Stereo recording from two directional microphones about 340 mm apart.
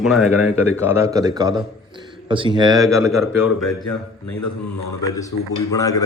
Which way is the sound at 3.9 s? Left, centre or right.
Left.